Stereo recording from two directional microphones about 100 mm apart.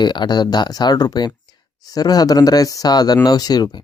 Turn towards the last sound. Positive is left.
turn(degrees=40)  # may be behind; listen again after turning